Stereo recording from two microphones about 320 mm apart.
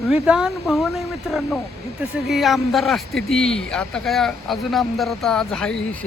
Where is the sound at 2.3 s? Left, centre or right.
Centre.